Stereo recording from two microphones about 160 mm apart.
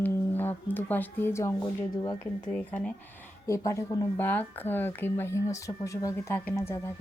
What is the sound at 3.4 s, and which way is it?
Speech, 20° left (ahead or behind).